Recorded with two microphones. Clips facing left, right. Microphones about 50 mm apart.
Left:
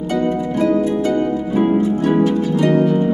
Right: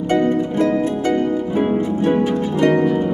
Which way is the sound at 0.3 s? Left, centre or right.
Right.